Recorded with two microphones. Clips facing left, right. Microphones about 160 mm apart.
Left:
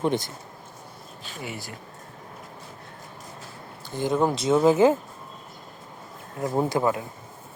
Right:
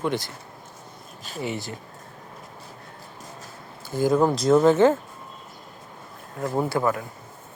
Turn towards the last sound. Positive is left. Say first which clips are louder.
# even
turn(degrees=20)  # may be behind; listen again after turning